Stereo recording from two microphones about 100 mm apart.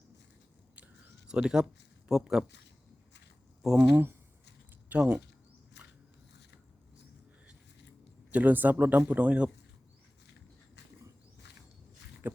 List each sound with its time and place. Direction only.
1.3 s speech: 5° right (ahead or behind)
3.6 s speech: 5° right (ahead or behind)
4.9 s speech: 15° right (ahead or behind)
8.3 s speech: 15° right (ahead or behind)
12.2 s dog: 20° right (ahead or behind)